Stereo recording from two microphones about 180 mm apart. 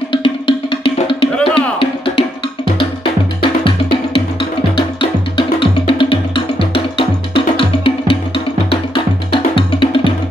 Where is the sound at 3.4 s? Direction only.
30° left (ahead or behind).